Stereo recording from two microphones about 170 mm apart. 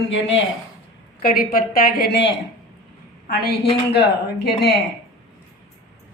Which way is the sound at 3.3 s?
65° left (ahead or behind).